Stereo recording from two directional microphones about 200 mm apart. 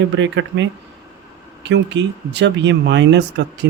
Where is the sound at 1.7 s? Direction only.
60° right (ahead or behind).